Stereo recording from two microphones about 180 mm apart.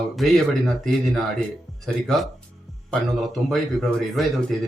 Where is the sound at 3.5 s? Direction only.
Centre (ahead or behind).